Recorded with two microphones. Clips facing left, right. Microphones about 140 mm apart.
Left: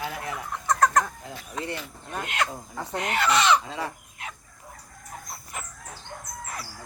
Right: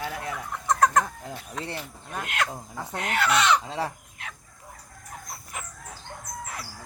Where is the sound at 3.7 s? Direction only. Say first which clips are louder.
Right 2 dB; 30° right (ahead or behind).